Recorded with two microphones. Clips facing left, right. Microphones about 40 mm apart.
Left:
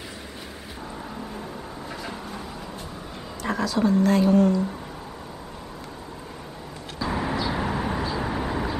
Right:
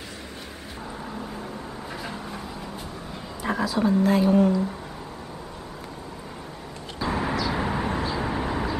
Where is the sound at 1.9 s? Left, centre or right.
Centre.